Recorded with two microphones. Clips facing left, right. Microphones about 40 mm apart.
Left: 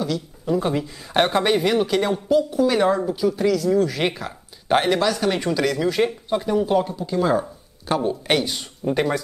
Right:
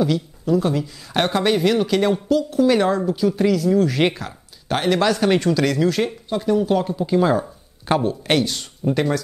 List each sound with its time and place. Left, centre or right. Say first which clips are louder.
0.5 s speech: right 2 dB; centre
2.2 s speech: even; centre
2.6 s speech: right 2 dB; centre
4.6 s speech: left 2 dB; centre
5.0 s speech: right 3 dB; centre
5.4 s speech: right 3 dB; centre
7.0 s speech: right 5 dB; centre
8.0 s speech: right 1 dB; centre